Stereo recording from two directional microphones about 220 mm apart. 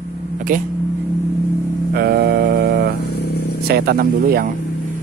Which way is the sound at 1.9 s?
45° right (ahead or behind).